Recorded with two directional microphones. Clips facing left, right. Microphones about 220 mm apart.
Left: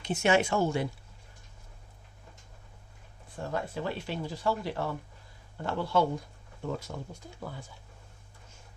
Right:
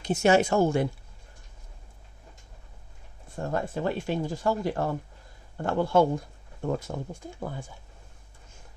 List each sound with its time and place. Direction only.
0.0 s speech: 40° right (ahead or behind)
3.4 s speech: 45° right (ahead or behind)